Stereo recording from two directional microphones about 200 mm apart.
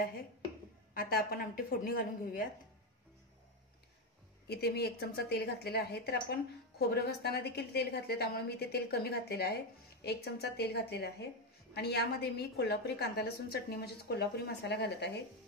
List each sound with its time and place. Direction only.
0.9 s a woman's voice: 45° left (ahead or behind)
4.5 s a woman's voice: 50° left (ahead or behind)